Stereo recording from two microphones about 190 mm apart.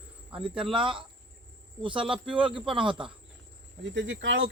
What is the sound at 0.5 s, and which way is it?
Speech, 5° right (ahead or behind).